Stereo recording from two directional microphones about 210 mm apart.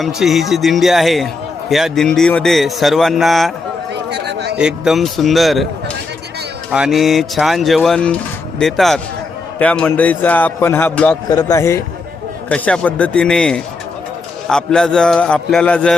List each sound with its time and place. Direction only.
0.0 s speech: centre (ahead or behind)
4.1 s a sound: 55° right (ahead or behind)
4.5 s speech: 5° right (ahead or behind)
6.7 s a man's voice: 5° right (ahead or behind)
11.3 s a man's voice: 15° left (ahead or behind)